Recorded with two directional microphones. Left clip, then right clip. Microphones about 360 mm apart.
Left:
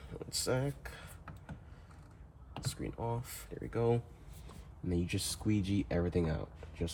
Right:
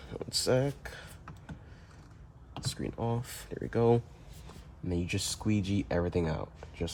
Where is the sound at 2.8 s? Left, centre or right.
Right.